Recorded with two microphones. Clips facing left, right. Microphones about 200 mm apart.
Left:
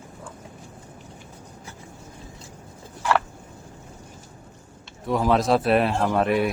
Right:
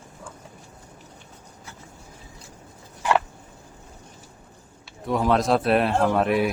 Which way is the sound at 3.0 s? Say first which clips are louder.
Right 1 dB; 20° right (ahead or behind).